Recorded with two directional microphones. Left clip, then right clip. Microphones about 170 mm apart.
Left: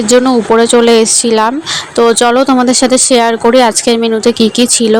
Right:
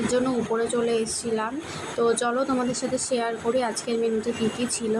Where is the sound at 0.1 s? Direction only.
60° left (ahead or behind).